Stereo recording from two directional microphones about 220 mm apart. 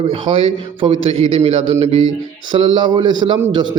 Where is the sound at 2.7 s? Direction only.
20° right (ahead or behind).